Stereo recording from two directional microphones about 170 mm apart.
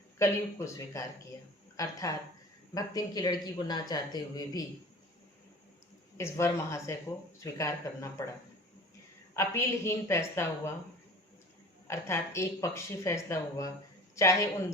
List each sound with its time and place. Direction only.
0.2 s speech: 15° left (ahead or behind)
6.1 s speech: 15° left (ahead or behind)
9.3 s speech: 15° left (ahead or behind)
11.9 s speech: 15° left (ahead or behind)